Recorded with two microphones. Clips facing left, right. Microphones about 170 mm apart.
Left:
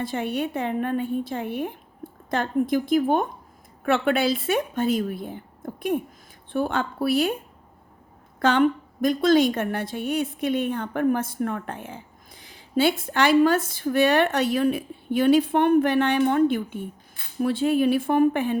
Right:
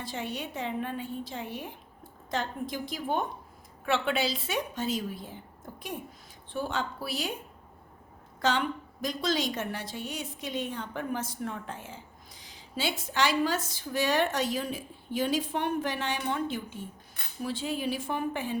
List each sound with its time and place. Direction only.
0.0 s a woman's voice: 55° left (ahead or behind)
8.4 s a woman's voice: 55° left (ahead or behind)